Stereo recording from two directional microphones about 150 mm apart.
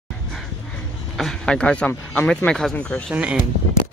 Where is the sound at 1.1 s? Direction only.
5° left (ahead or behind).